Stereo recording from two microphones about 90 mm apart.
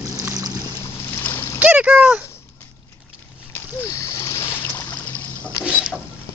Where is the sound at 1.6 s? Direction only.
20° right (ahead or behind).